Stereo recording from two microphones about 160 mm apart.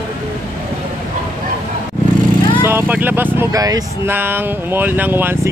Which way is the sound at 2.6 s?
10° right (ahead or behind).